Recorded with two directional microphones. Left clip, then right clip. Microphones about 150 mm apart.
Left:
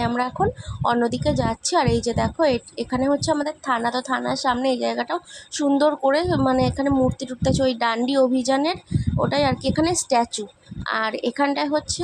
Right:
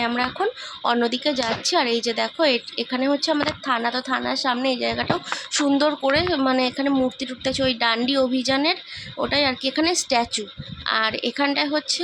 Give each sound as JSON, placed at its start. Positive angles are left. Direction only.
{"t": 0.0, "sound": "a woman's voice", "side_deg": 15}